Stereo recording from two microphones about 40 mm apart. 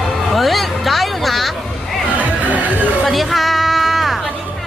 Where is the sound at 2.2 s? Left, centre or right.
Right.